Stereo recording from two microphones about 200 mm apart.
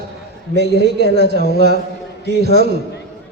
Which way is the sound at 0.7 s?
55° right (ahead or behind).